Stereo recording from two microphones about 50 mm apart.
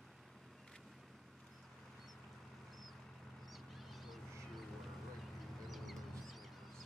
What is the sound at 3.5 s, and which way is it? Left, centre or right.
Bird, centre.